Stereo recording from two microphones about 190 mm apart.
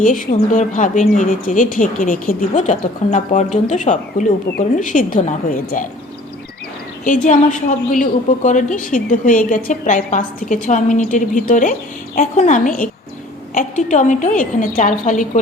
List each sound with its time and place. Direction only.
0.0 s a woman's voice: 45° left (ahead or behind)
7.0 s a woman's voice: 40° left (ahead or behind)